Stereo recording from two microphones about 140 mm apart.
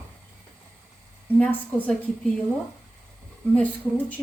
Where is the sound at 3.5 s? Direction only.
10° left (ahead or behind).